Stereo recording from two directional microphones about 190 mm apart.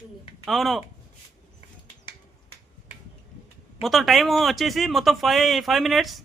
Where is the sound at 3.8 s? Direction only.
Centre (ahead or behind).